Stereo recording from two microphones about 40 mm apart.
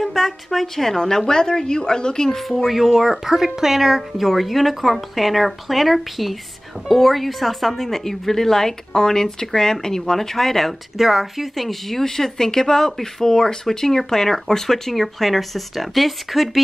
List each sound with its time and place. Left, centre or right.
0.0 s a woman's voice: centre
2.3 s speech: centre
12.0 s speech: centre